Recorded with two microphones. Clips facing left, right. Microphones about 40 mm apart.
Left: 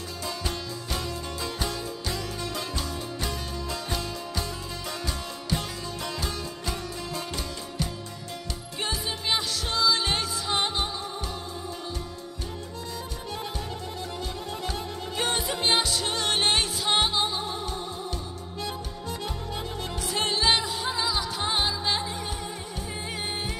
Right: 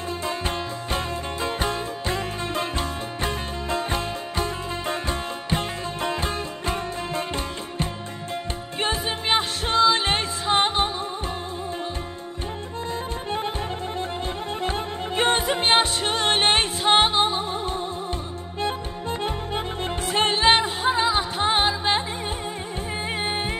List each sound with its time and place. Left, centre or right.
0.2 s music: right
12.9 s music: right
23.1 s music: right